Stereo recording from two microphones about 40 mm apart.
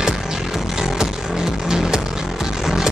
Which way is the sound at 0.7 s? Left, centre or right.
Centre.